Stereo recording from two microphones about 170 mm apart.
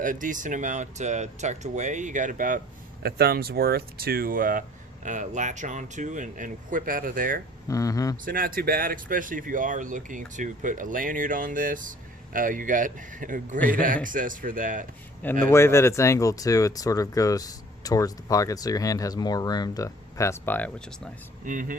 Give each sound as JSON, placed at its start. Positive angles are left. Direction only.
{"t": 0.0, "sound": "speech", "side_deg": -50}
{"t": 3.0, "sound": "speech", "side_deg": -65}
{"t": 7.7, "sound": "speech", "side_deg": 20}
{"t": 8.2, "sound": "speech", "side_deg": -55}
{"t": 13.6, "sound": "a man's voice", "side_deg": 10}
{"t": 13.8, "sound": "speech", "side_deg": -50}
{"t": 15.4, "sound": "speech", "side_deg": 15}
{"t": 21.4, "sound": "speech", "side_deg": -50}